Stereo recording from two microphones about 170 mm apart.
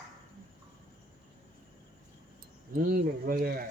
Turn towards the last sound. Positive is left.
turn(degrees=-60)  # may be behind; listen again after turning